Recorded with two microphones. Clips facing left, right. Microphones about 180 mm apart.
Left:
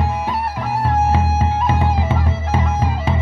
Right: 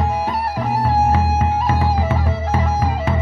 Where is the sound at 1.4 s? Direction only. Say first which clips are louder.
Even; 20° left (ahead or behind).